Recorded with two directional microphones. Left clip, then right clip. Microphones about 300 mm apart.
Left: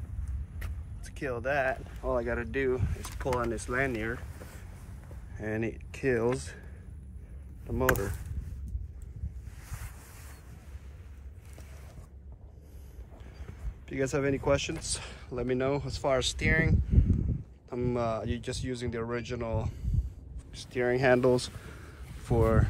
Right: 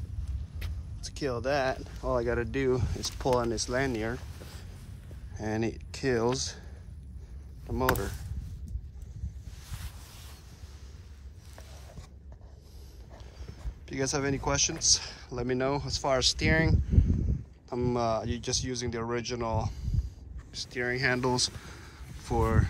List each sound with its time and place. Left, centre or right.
1.2 s speech: centre
2.0 s speech: right
3.0 s speech: centre
5.3 s speech: centre
7.6 s speech: centre
13.8 s speech: centre